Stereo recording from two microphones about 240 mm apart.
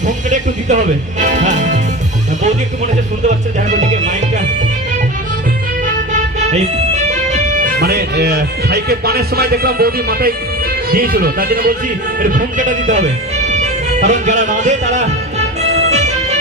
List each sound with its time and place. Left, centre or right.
0.3 s speech: right
3.3 s music: right
6.5 s speech: right
15.9 s music: right